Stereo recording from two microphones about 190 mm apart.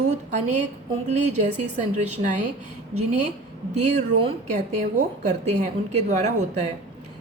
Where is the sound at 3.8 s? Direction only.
35° right (ahead or behind).